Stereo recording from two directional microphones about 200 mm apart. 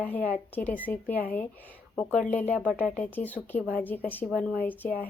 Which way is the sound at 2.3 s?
10° left (ahead or behind).